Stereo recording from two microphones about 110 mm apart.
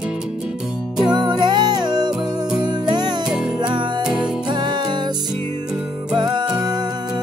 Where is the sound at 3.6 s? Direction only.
40° right (ahead or behind).